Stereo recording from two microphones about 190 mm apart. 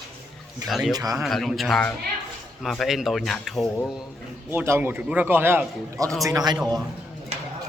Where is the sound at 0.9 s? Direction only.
20° right (ahead or behind).